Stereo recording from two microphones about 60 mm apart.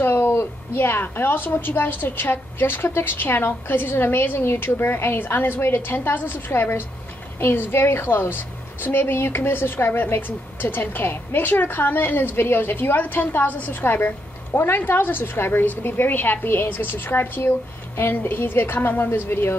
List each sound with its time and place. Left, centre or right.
0.0 s a woman's voice: left